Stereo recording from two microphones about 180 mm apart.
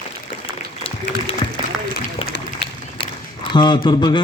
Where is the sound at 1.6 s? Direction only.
25° right (ahead or behind).